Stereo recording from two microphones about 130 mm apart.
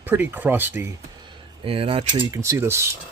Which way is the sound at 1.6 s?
45° right (ahead or behind).